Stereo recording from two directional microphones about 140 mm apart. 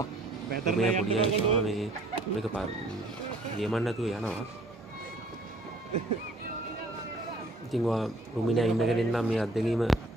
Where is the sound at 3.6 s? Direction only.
Centre (ahead or behind).